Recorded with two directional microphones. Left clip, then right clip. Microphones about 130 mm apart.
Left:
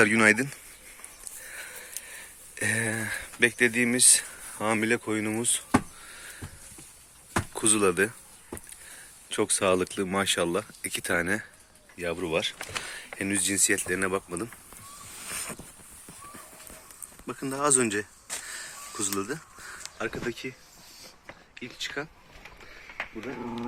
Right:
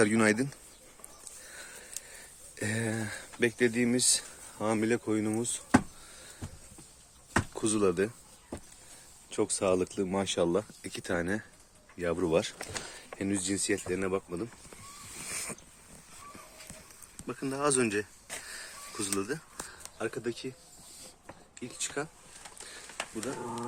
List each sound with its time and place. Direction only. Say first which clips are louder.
0.0 s speech: left 6 dB; 15° right (ahead or behind)
1.5 s sniff: left 7 dB; 20° right (ahead or behind)
2.6 s speech: left 6 dB; 20° right (ahead or behind)
7.5 s speech: left 6 dB; 15° right (ahead or behind)
9.3 s speech: left 4 dB; centre (ahead or behind); by 11.4 s 20° right (ahead or behind)
12.0 s speech: left 1 dB; 45° right (ahead or behind)
12.3 s speech: left 2 dB; 55° right (ahead or behind)
12.8 s speech: left 4 dB; 20° right (ahead or behind); by 14.5 s 5° right (ahead or behind)
15.3 s a sound: left 3 dB; 5° right (ahead or behind)
17.2 s speech: left 3 dB; centre (ahead or behind)
18.4 s a sound: left 4 dB; centre (ahead or behind)
20.0 s speech: left 2 dB; centre (ahead or behind)
21.5 s speech: left 3 dB; 10° right (ahead or behind)